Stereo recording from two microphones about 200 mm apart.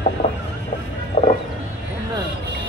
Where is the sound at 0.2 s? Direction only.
30° left (ahead or behind).